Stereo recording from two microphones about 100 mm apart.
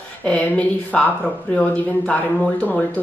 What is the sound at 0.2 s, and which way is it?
Speech, 10° left (ahead or behind).